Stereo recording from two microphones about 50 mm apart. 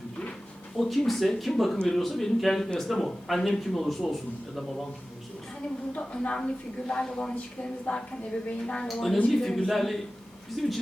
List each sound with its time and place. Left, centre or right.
0.8 s speech: centre
6.0 s a woman's voice: centre